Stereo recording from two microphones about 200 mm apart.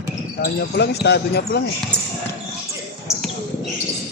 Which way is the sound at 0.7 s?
55° left (ahead or behind).